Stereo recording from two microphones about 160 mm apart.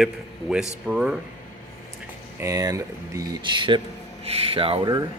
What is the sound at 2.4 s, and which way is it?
Speech, 20° right (ahead or behind).